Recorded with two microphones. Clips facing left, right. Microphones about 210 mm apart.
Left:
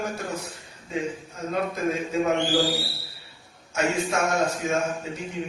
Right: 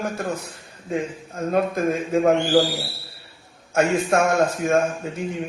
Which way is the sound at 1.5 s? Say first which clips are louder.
Right 5 dB; 55° right (ahead or behind).